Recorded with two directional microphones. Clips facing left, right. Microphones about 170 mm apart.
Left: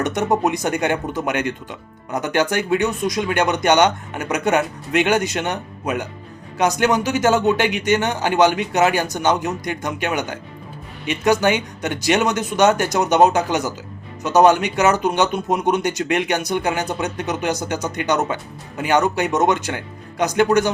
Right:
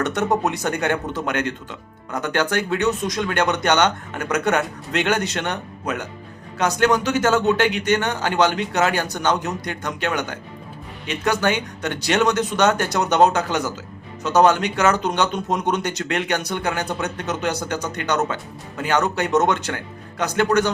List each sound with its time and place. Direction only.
0.0 s speech: 10° left (ahead or behind)